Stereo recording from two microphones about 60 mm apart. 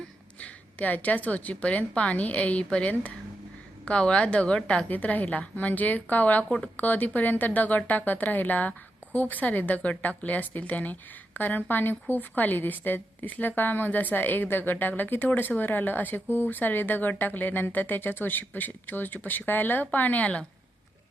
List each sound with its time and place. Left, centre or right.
0.3 s a woman's voice: left
4.9 s a woman's voice: left